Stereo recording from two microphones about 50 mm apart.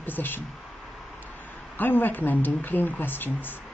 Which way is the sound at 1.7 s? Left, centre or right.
Left.